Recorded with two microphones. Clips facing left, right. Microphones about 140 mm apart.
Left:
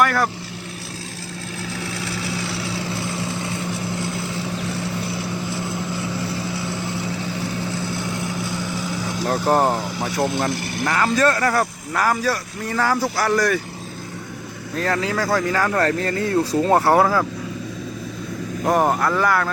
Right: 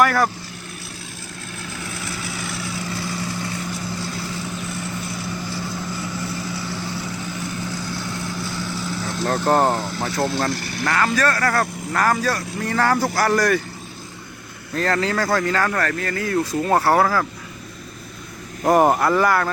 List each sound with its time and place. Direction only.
0.0 s speech: centre (ahead or behind)
2.3 s vehicle: 30° left (ahead or behind)
4.7 s vehicle: 25° left (ahead or behind)
8.5 s speech: 15° left (ahead or behind)
11.6 s speech: 5° left (ahead or behind)
14.8 s speech: 5° left (ahead or behind)
15.8 s speech: 25° left (ahead or behind)
18.6 s speech: 10° right (ahead or behind)